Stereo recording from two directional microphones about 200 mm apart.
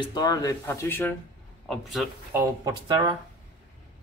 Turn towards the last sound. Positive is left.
turn(degrees=-20)  # may be behind; listen again after turning